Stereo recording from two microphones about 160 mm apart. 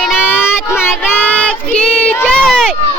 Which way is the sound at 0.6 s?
15° left (ahead or behind).